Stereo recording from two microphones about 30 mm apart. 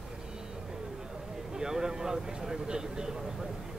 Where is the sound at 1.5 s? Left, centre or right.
Centre.